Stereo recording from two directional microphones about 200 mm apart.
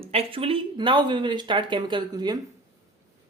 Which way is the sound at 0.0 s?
30° right (ahead or behind).